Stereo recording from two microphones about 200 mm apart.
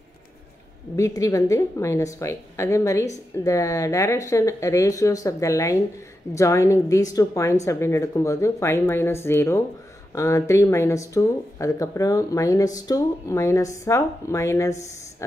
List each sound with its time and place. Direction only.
0.9 s speech: 15° left (ahead or behind)